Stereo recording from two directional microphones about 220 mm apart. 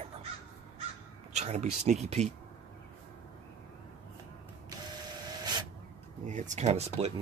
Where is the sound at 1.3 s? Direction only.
30° right (ahead or behind).